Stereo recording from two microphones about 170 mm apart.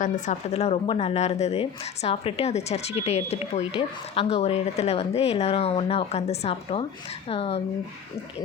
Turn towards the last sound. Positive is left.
turn(degrees=35)  # may be behind; listen again after turning